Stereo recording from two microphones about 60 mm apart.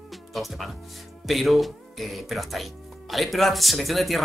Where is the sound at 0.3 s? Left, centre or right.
Centre.